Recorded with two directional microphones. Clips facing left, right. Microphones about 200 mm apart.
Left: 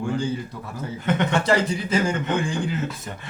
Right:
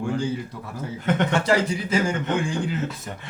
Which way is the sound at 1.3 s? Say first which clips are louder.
Even; 10° right (ahead or behind).